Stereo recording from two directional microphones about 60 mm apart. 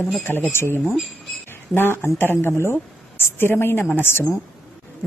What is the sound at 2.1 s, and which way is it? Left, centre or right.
Speech, left.